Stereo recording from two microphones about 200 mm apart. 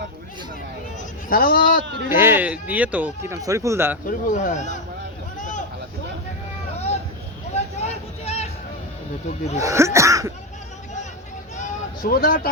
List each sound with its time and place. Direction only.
1.3 s speech: 45° left (ahead or behind)
2.0 s speech: 10° right (ahead or behind)
4.0 s speech: 40° left (ahead or behind)
5.4 s a sound: 40° left (ahead or behind)
7.5 s vehicle: 35° left (ahead or behind)
9.6 s speech: 15° right (ahead or behind)
11.5 s a sound: 40° left (ahead or behind)